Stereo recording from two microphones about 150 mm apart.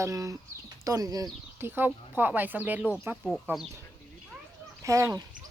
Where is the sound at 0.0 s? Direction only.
20° right (ahead or behind).